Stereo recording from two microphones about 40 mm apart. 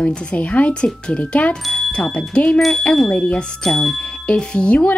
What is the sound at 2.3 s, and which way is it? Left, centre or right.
Speech, left.